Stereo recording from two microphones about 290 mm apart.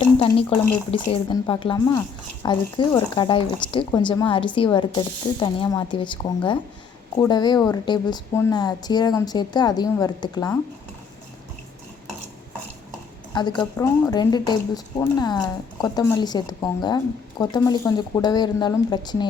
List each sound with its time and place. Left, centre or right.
0.2 s speech: centre
13.3 s speech: centre